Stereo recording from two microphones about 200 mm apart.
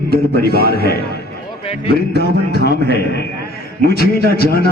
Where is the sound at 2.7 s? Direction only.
55° left (ahead or behind).